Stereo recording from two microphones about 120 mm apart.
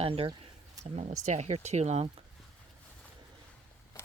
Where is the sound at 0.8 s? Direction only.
65° right (ahead or behind).